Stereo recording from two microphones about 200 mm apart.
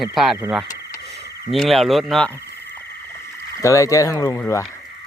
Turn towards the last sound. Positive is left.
turn(degrees=15)  # may be behind; listen again after turning